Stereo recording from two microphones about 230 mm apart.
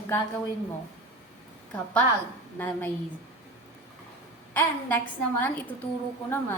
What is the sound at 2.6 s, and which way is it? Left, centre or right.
Speech, centre.